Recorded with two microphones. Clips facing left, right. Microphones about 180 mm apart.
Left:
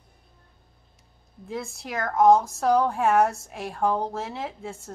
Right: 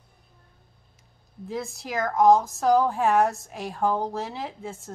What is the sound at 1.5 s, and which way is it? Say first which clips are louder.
Speech: right 1 dB; centre (ahead or behind).